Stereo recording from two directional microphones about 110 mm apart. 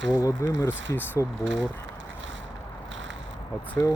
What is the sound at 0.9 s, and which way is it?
Speech, 15° left (ahead or behind).